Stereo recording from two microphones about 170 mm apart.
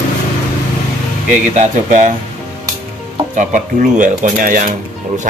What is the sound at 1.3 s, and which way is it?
Speech, 50° right (ahead or behind).